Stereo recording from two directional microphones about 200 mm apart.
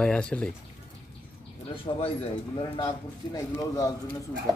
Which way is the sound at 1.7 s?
25° left (ahead or behind).